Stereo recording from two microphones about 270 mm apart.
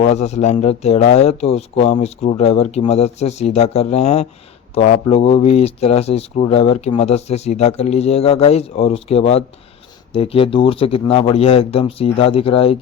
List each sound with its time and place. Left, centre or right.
0.0 s speech: left